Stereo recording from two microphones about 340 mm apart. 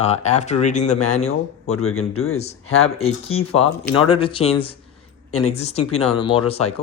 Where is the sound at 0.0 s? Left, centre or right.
Centre.